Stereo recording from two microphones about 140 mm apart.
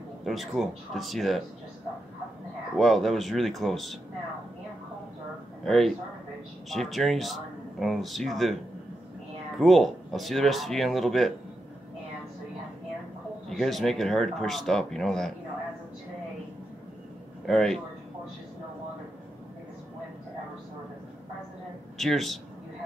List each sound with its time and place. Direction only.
0.2 s speech: centre (ahead or behind)
2.8 s speech: centre (ahead or behind)
5.7 s speech: centre (ahead or behind)
9.6 s speech: centre (ahead or behind)
13.5 s speech: centre (ahead or behind)
17.5 s speech: 5° left (ahead or behind)
21.9 s speech: centre (ahead or behind)